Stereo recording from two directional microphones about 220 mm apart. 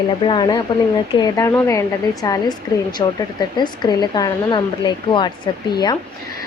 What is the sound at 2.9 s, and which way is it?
A woman's voice, 20° left (ahead or behind).